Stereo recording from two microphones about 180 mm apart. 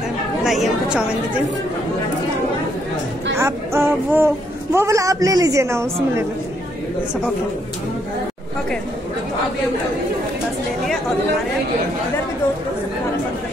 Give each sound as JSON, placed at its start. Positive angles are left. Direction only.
{"t": 0.4, "sound": "a woman's voice", "side_deg": 0}
{"t": 3.3, "sound": "a woman's voice", "side_deg": -15}